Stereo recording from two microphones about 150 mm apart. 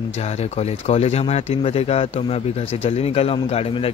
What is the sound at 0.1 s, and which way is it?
Speech, 45° left (ahead or behind).